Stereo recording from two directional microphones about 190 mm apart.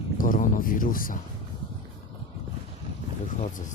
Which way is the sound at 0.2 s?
45° left (ahead or behind).